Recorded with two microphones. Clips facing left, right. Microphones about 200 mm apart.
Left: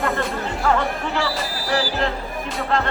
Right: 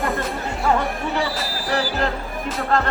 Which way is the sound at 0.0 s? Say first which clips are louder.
Left 1 dB; centre (ahead or behind).